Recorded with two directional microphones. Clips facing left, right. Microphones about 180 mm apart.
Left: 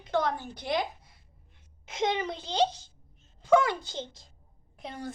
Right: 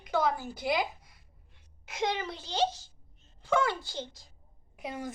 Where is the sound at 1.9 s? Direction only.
20° left (ahead or behind).